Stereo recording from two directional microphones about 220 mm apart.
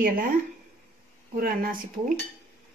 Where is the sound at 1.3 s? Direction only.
40° right (ahead or behind).